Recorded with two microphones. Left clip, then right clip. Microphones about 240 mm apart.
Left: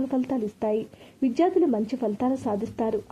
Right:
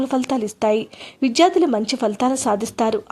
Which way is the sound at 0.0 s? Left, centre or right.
Centre.